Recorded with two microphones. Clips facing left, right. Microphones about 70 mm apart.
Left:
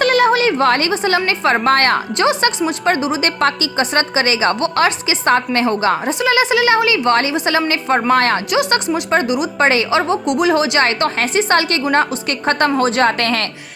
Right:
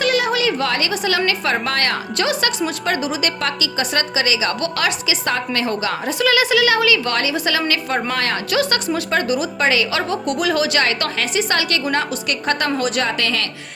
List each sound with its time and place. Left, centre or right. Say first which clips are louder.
0.0 s a woman's voice: left 5 dB; left
2.1 s a woman's voice: left 4 dB; left
9.0 s a woman's voice: left 3 dB; left
9.6 s a woman's voice: left 4 dB; left
10.0 s a woman's voice: left 5 dB; left